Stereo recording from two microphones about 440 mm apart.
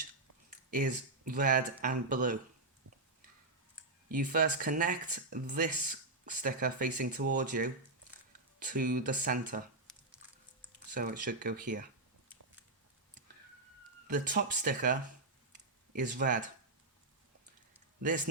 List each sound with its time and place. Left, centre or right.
0.7 s speech: centre
4.1 s speech: centre
9.9 s a sound: centre
10.9 s speech: centre
14.1 s speech: centre